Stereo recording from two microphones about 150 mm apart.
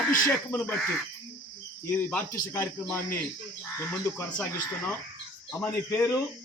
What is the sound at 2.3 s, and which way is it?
A man's voice, 15° left (ahead or behind).